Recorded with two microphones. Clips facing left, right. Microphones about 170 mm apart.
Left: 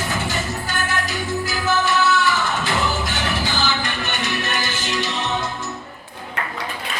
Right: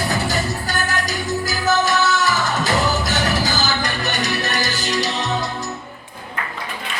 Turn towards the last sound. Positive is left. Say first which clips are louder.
# right 3 dB
turn(degrees=-40)  # may be behind; listen again after turning